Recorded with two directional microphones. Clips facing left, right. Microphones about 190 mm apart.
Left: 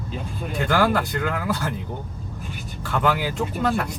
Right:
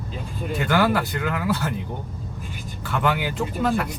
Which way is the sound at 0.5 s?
Centre (ahead or behind).